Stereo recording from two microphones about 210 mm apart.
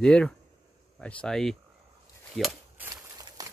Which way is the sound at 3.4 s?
15° right (ahead or behind).